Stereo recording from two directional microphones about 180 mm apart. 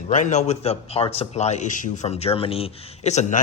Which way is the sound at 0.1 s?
40° left (ahead or behind).